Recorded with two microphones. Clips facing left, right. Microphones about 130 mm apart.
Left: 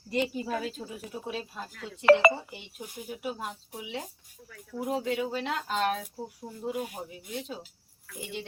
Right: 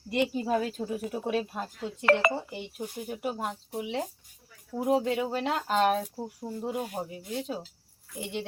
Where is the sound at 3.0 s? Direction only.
45° right (ahead or behind).